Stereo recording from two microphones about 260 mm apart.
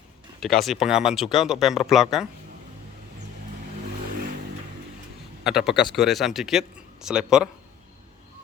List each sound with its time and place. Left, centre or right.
0.3 s speech: centre
5.4 s a man's voice: centre